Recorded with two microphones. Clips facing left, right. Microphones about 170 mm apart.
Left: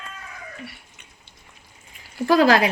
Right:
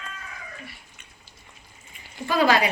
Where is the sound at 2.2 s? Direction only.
90° left.